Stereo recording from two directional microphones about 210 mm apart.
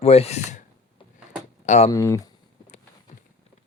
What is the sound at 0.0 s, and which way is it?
Speech, 30° left (ahead or behind).